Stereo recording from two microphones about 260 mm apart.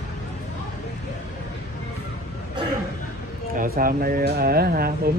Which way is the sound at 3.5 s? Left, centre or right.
Right.